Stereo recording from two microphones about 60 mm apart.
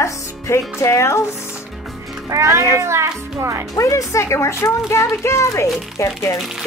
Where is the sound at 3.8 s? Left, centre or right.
Left.